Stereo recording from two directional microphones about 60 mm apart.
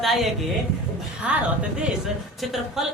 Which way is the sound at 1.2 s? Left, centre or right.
Centre.